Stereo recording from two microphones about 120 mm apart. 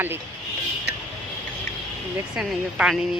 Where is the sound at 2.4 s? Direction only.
5° right (ahead or behind).